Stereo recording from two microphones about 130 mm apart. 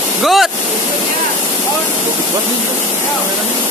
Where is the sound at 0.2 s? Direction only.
Centre (ahead or behind).